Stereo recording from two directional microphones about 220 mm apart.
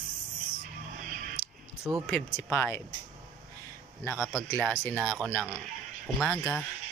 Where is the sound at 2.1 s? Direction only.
5° left (ahead or behind).